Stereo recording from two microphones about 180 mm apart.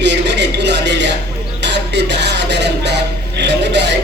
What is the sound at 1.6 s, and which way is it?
Music, 75° right (ahead or behind).